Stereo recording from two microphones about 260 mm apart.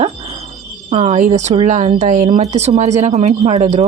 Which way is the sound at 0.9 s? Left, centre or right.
Right.